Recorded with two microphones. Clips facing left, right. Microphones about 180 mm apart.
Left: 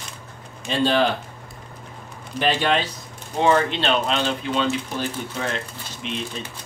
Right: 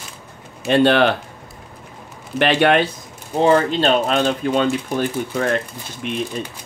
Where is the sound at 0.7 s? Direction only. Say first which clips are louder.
Right 6 dB; 65° right (ahead or behind).